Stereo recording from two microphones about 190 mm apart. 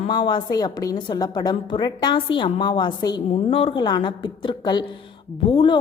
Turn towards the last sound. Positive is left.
turn(degrees=25)  # may be behind; listen again after turning